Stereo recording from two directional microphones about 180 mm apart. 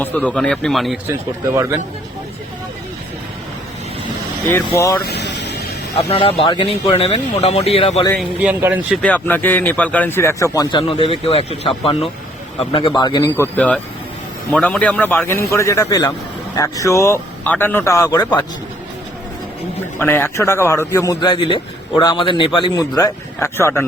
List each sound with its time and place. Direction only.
0.3 s speech: 5° left (ahead or behind)
1.0 s a man's voice: 15° right (ahead or behind)
5.0 s music: 70° left (ahead or behind)
6.0 s speech: 30° left (ahead or behind)
8.4 s a man's voice: 10° right (ahead or behind)
9.0 s a man's voice: 10° left (ahead or behind); by 13.3 s 25° left (ahead or behind)
13.4 s speech: 5° left (ahead or behind)
20.0 s a man's voice: 10° left (ahead or behind)